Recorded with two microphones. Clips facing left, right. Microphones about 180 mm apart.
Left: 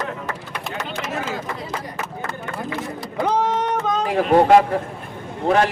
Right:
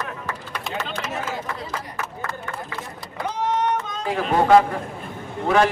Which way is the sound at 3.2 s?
90° left.